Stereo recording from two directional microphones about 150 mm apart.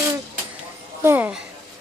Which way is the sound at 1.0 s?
15° right (ahead or behind).